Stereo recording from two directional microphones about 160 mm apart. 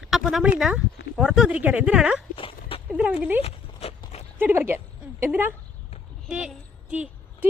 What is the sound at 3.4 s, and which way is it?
Horse, 40° left (ahead or behind).